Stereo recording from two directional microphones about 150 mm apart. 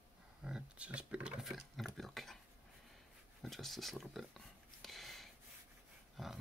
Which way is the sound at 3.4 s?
Centre (ahead or behind).